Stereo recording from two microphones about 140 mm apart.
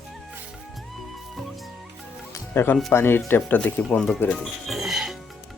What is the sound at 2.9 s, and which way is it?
Speech, 15° left (ahead or behind).